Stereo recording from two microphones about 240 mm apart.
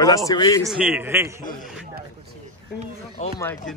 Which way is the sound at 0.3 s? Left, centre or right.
Centre.